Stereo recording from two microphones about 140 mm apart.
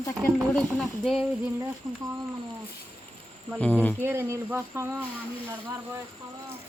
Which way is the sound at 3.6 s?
10° left (ahead or behind).